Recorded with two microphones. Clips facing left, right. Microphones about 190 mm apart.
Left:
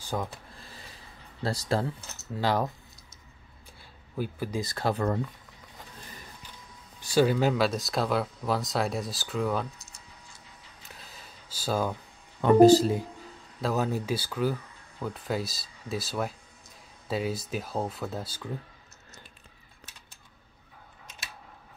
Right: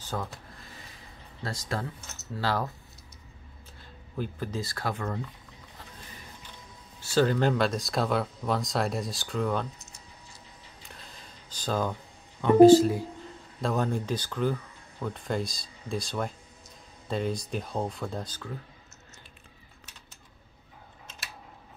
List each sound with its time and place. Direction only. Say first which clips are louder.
0.0 s speech: left 2 dB; 15° left (ahead or behind)
1.4 s speech: left 5 dB; 35° left (ahead or behind)
2.3 s speech: left 3 dB; 15° left (ahead or behind)
4.2 s speech: left 2 dB; 10° left (ahead or behind)
4.9 s speech: left 6 dB; 40° left (ahead or behind)
7.0 s speech: left 1 dB; 15° left (ahead or behind)
10.8 s camera: even; 5° left (ahead or behind)
12.4 s speech: right 2 dB; 40° left (ahead or behind)
13.6 s speech: even; 5° left (ahead or behind)